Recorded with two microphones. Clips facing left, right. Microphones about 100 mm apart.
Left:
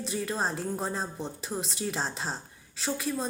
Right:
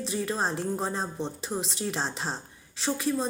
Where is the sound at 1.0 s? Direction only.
25° right (ahead or behind).